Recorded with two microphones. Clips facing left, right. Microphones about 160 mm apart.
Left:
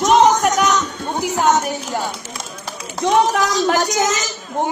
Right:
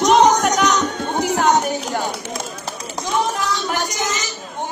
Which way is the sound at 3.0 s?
70° left (ahead or behind).